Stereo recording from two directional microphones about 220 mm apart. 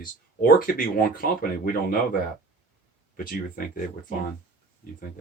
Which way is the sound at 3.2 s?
40° left (ahead or behind).